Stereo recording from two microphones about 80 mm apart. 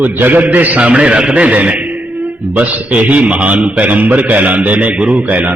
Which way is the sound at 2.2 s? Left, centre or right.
Right.